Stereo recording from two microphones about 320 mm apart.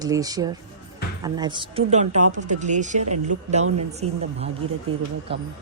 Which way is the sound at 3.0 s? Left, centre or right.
Right.